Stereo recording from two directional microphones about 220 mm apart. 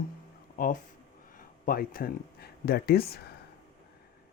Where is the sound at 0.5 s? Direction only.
40° left (ahead or behind).